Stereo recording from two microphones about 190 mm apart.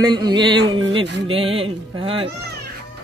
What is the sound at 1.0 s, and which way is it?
Music, 65° right (ahead or behind).